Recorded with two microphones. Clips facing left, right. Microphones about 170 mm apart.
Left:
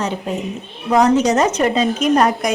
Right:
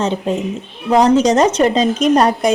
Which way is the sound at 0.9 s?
30° right (ahead or behind).